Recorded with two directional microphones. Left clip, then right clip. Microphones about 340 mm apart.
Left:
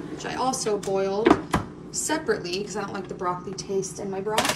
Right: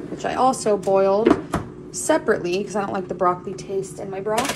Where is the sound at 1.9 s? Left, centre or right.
Centre.